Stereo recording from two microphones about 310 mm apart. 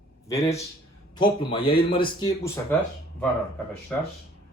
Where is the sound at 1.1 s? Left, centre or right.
Centre.